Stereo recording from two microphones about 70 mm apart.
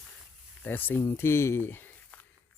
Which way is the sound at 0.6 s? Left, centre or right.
Left.